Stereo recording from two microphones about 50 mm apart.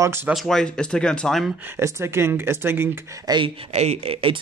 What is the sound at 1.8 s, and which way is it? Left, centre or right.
Speech, right.